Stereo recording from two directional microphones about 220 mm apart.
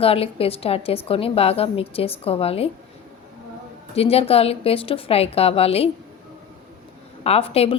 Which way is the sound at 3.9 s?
25° left (ahead or behind).